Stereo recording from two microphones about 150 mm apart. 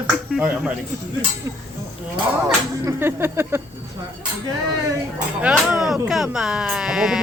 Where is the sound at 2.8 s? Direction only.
15° right (ahead or behind).